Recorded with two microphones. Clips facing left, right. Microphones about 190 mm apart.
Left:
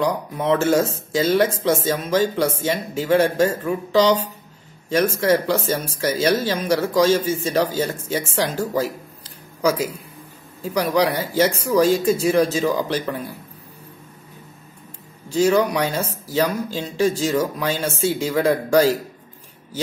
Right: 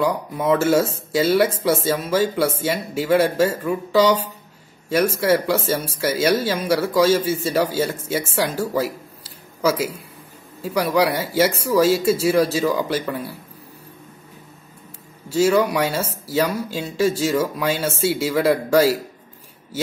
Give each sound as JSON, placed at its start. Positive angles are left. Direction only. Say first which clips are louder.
{"t": 0.0, "sound": "speech", "louder": "right 1 dB", "side_deg": -5}
{"t": 8.4, "sound": "a sound", "louder": "even", "side_deg": -10}
{"t": 10.6, "sound": "a man's voice", "louder": "even", "side_deg": -5}
{"t": 15.2, "sound": "speech", "louder": "even", "side_deg": -5}